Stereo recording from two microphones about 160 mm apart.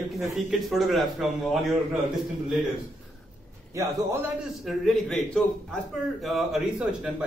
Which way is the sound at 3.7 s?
15° right (ahead or behind).